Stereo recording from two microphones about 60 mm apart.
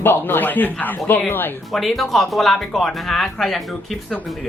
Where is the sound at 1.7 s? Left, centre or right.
Centre.